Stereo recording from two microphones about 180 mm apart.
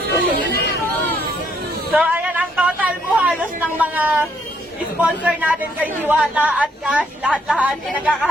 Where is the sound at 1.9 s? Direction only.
5° right (ahead or behind).